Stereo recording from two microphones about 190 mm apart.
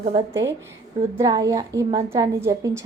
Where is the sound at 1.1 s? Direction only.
15° right (ahead or behind).